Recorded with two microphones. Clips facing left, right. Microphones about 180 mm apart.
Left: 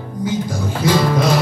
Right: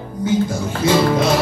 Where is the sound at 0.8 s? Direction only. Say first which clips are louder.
Right 1 dB; 25° right (ahead or behind).